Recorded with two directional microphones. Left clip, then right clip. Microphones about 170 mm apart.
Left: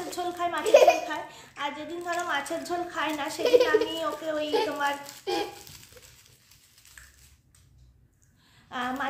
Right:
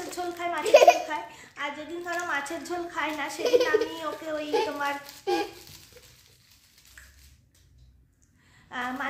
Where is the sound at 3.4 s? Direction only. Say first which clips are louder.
Left 2 dB; 30° right (ahead or behind).